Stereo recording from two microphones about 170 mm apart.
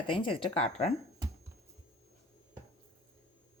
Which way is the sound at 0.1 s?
30° left (ahead or behind).